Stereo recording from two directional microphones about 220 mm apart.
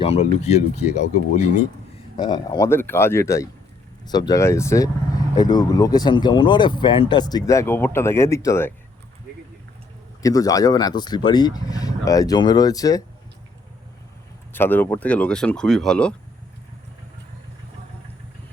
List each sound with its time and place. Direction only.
0.0 s speech: 30° left (ahead or behind)
2.1 s speech: 20° left (ahead or behind)
10.2 s speech: 15° left (ahead or behind)
14.5 s speech: 10° left (ahead or behind)